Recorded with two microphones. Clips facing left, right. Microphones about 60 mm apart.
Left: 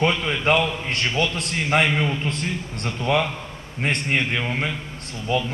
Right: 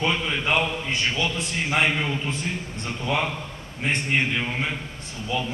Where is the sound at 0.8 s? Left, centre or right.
Left.